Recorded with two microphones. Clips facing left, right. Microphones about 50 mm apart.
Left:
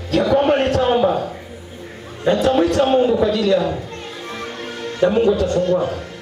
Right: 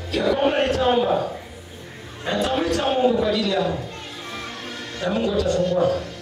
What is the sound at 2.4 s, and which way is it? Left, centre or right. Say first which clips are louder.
Speech: left 5 dB; left.